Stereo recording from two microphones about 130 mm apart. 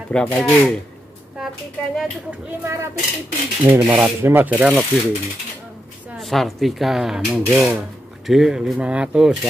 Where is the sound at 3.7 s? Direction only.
10° right (ahead or behind).